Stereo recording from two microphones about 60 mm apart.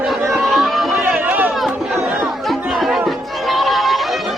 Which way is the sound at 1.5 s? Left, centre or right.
Centre.